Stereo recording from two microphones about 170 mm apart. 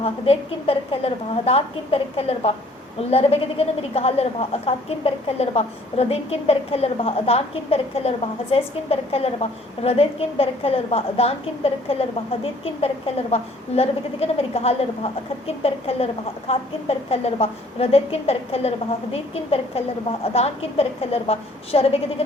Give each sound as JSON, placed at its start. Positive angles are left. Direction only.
{"t": 0.0, "sound": "a woman's voice", "side_deg": 35}
{"t": 13.3, "sound": "a woman's voice", "side_deg": 35}